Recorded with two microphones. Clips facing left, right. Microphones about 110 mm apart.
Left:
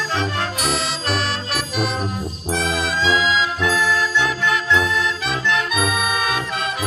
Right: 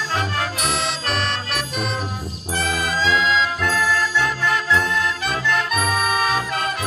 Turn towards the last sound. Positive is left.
turn(degrees=0)  # may be behind; listen again after turning